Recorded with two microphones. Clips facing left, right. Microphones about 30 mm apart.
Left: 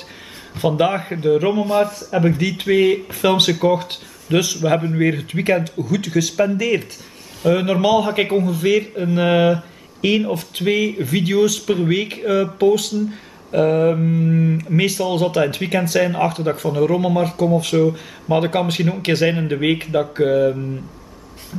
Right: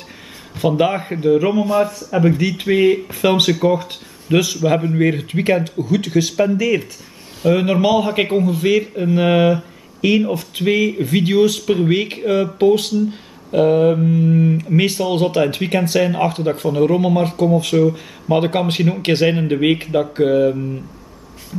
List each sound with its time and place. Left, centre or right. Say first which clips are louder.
0.6 s speech: right 1 dB; centre
3.7 s speech: even; left
4.3 s a man's voice: right 2 dB; centre
6.6 s a man's voice: right 2 dB; centre
11.9 s a man's voice: right 1 dB; centre
14.3 s speech: right 3 dB; centre
14.6 s a man's voice: right 2 dB; centre
17.5 s a man's voice: right 2 dB; centre